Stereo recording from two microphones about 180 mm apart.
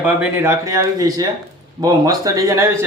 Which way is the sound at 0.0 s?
10° right (ahead or behind).